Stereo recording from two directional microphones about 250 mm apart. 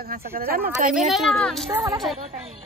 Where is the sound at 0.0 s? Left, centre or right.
Right.